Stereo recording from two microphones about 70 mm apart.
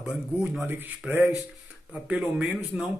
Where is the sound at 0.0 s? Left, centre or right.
Centre.